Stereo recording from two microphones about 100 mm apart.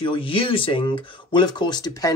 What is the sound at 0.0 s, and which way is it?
Speech, 60° left (ahead or behind).